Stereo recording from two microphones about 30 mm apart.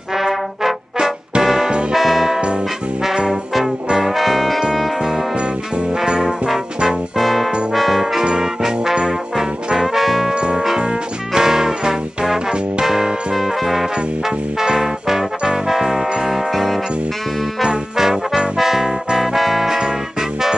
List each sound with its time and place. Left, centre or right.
0.2 s trombone: centre
1.4 s music: centre
4.1 s music: centre
6.0 s brass instrument: right
7.2 s music: centre
7.7 s brass instrument: centre
8.2 s music: right
10.0 s brass instrument: centre
10.3 s music: right
11.3 s music: centre
14.6 s music: centre
16.3 s music: centre
17.9 s music: centre
19.8 s music: centre